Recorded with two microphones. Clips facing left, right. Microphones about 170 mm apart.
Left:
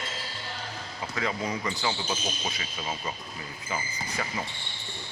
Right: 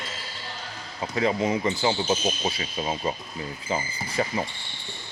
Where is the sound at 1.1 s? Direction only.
25° right (ahead or behind).